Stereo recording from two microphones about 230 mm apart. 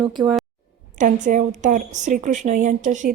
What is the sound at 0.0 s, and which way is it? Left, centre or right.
Speech, centre.